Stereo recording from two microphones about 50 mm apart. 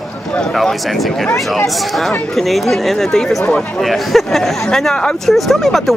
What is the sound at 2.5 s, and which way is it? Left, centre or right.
Speech, centre.